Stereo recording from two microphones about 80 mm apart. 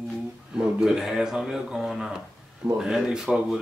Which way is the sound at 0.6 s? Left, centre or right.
Centre.